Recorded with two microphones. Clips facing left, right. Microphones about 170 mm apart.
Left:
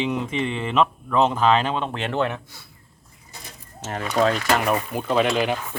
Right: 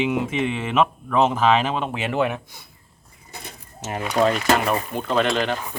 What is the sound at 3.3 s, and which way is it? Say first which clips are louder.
Bird: right 4 dB; 60° right (ahead or behind).